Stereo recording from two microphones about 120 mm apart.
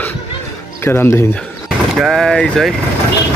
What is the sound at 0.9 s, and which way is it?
Speech, 20° left (ahead or behind).